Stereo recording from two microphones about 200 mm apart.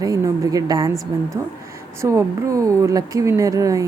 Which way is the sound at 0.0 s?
15° right (ahead or behind).